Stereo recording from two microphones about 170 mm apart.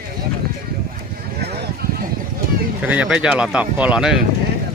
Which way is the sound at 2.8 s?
5° right (ahead or behind).